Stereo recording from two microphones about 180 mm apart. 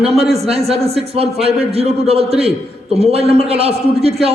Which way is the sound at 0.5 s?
35° right (ahead or behind).